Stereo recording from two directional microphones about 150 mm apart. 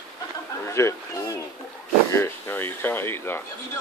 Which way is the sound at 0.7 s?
20° left (ahead or behind).